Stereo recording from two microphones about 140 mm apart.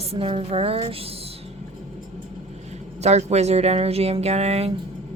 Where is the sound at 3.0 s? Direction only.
50° right (ahead or behind).